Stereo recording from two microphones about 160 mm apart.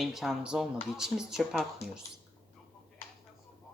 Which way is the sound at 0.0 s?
Centre (ahead or behind).